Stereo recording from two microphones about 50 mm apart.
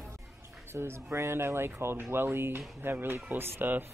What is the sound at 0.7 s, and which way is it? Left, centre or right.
Speech, right.